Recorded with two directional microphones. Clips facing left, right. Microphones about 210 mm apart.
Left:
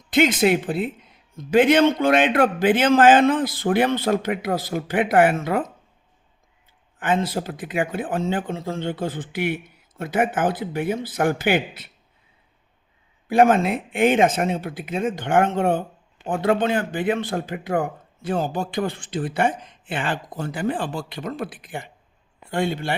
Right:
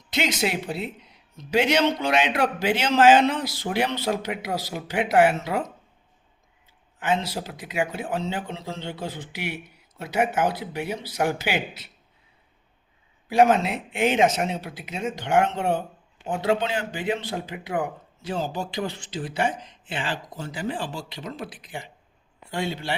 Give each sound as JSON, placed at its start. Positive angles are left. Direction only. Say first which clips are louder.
{"t": 0.1, "sound": "speech", "louder": "left 8 dB", "side_deg": 50}
{"t": 7.0, "sound": "speech", "louder": "left 3 dB", "side_deg": 50}
{"t": 13.2, "sound": "speech", "louder": "left 2 dB", "side_deg": 50}